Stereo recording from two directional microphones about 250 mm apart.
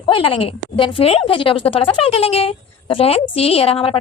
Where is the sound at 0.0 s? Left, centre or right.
Left.